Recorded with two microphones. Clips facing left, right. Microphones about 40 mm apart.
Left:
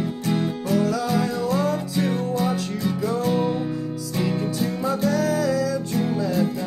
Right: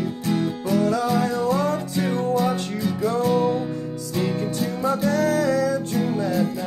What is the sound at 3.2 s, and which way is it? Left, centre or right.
Music, centre.